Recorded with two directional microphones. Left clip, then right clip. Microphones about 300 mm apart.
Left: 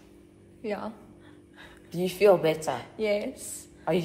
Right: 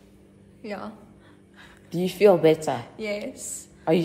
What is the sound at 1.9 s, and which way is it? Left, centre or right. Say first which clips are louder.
Speech: right 3 dB; right.